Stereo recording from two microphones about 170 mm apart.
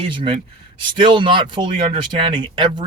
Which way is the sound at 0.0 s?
30° right (ahead or behind).